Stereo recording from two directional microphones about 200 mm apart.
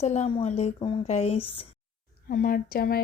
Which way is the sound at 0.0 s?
35° left (ahead or behind).